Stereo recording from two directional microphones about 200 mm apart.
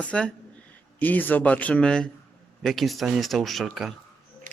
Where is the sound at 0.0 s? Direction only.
5° left (ahead or behind).